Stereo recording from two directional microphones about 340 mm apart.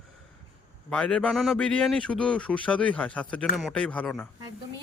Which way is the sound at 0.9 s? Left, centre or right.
Centre.